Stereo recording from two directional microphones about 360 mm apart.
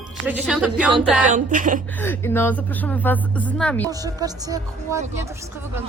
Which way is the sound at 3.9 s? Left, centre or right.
Centre.